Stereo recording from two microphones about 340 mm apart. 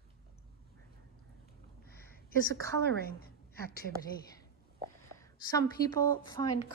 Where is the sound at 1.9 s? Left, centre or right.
Left.